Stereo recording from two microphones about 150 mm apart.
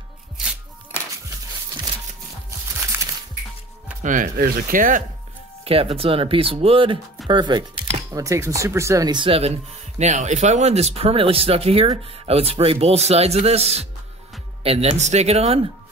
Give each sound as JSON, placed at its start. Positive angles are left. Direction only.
{"t": 4.0, "sound": "speech", "side_deg": -60}
{"t": 5.6, "sound": "speech", "side_deg": -40}
{"t": 8.1, "sound": "speech", "side_deg": -20}
{"t": 9.9, "sound": "speech", "side_deg": -50}